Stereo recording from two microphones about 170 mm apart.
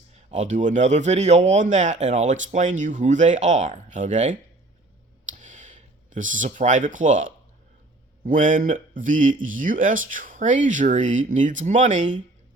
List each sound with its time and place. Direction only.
0.1 s speech: 40° right (ahead or behind)
5.2 s a sound: 45° right (ahead or behind)
8.2 s speech: 50° right (ahead or behind)